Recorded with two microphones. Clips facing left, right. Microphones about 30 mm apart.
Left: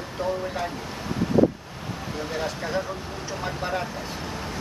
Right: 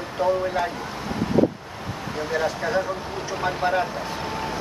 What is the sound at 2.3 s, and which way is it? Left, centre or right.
Speech, centre.